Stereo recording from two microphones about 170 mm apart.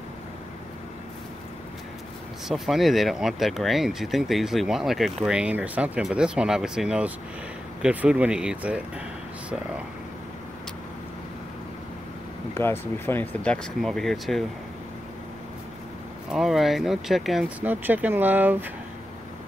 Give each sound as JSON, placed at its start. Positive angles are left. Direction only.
{"t": 2.4, "sound": "speech", "side_deg": 0}
{"t": 12.5, "sound": "speech", "side_deg": 15}
{"t": 16.3, "sound": "speech", "side_deg": 0}